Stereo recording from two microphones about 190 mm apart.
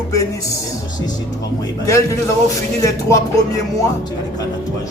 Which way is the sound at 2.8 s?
15° left (ahead or behind).